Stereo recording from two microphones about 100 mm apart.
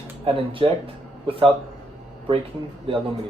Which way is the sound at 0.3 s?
60° right (ahead or behind).